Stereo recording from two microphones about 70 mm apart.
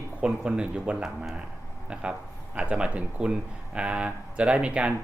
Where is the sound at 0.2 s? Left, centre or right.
Centre.